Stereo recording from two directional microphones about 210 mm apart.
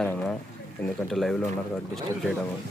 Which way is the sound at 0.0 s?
5° left (ahead or behind).